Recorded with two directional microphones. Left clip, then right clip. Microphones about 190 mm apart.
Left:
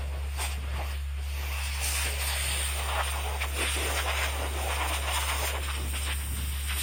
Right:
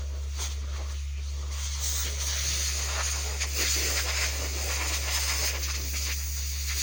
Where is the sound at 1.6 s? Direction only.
30° right (ahead or behind).